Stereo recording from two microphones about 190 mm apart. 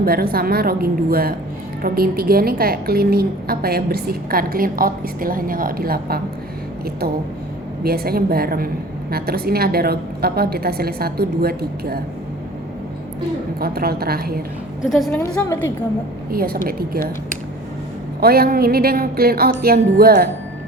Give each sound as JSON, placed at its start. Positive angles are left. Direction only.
{"t": 0.0, "sound": "a woman's voice", "side_deg": -55}
{"t": 7.9, "sound": "a woman's voice", "side_deg": -55}
{"t": 13.6, "sound": "a woman's voice", "side_deg": -55}
{"t": 14.8, "sound": "a woman's voice", "side_deg": 0}
{"t": 16.3, "sound": "a woman's voice", "side_deg": -50}